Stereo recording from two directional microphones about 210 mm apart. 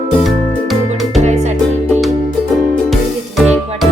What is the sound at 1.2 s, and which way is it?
Music, 30° right (ahead or behind).